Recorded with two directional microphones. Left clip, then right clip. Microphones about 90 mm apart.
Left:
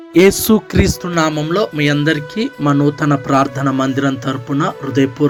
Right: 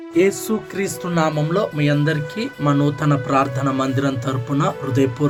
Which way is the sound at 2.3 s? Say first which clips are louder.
Left 4 dB; 80° left.